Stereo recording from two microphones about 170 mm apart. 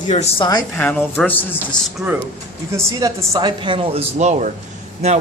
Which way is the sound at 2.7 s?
15° right (ahead or behind).